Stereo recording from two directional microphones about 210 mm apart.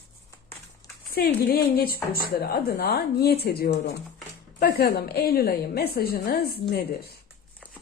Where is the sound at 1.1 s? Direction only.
45° left (ahead or behind).